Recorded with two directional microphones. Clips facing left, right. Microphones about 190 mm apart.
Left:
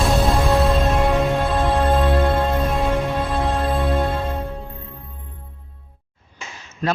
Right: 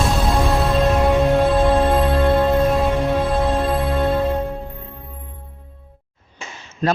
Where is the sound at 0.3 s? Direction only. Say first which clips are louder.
Left 1 dB; centre (ahead or behind).